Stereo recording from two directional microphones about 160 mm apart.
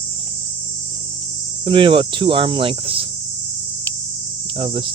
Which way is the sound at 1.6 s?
30° right (ahead or behind).